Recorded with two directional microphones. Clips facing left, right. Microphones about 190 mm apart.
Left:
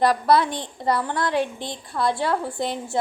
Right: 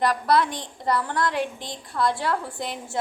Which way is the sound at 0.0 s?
30° left (ahead or behind).